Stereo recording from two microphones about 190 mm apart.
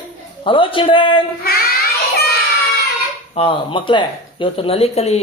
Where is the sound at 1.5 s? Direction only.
55° left (ahead or behind).